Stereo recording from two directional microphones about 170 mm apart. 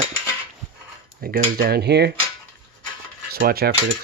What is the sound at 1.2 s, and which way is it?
Cutlery, 60° right (ahead or behind).